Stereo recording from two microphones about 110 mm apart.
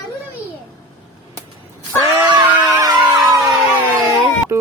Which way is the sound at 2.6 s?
35° right (ahead or behind).